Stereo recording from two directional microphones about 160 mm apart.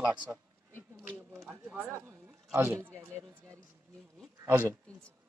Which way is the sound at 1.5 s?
15° right (ahead or behind).